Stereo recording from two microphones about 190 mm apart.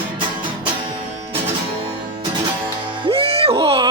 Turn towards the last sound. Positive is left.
turn(degrees=-30)  # may be behind; listen again after turning